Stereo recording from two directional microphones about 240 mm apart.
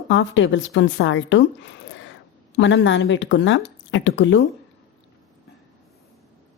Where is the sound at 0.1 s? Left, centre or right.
Left.